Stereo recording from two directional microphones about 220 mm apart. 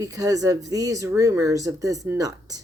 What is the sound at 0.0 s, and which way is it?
Speech, 15° right (ahead or behind).